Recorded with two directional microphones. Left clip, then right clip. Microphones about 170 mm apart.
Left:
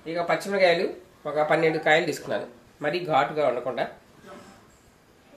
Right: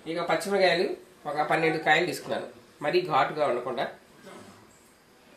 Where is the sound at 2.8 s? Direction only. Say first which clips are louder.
Left 1 dB; 50° left (ahead or behind).